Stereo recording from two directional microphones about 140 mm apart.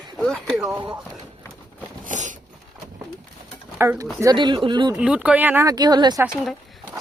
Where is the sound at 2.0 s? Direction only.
65° right (ahead or behind).